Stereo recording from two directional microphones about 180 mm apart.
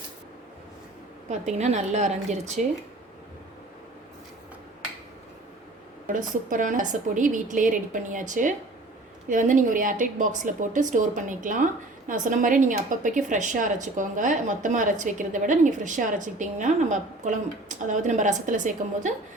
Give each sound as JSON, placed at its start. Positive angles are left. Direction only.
{"t": 1.3, "sound": "a woman's voice", "side_deg": -40}
{"t": 6.1, "sound": "a woman's voice", "side_deg": -45}